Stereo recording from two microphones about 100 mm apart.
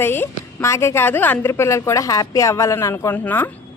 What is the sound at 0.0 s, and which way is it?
A woman's voice, 25° left (ahead or behind).